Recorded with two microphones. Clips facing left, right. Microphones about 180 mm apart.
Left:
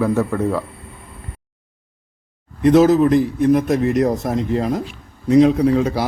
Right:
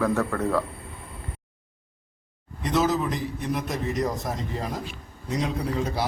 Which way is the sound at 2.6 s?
55° left (ahead or behind).